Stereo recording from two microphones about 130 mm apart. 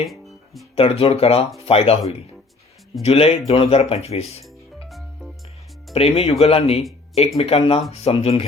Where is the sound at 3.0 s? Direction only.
50° left (ahead or behind).